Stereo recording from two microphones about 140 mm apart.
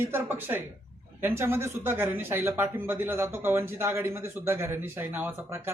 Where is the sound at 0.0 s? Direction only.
15° right (ahead or behind).